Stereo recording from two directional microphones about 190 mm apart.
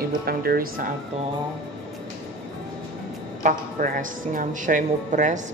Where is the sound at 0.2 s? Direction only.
55° right (ahead or behind).